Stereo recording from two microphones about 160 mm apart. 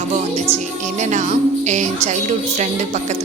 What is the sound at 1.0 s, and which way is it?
Speech, 50° right (ahead or behind).